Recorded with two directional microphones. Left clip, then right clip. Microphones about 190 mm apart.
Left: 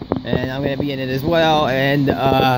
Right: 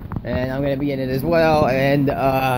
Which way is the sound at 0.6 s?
20° left (ahead or behind).